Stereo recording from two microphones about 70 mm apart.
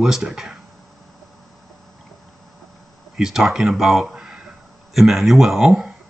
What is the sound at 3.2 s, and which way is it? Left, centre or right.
Speech, centre.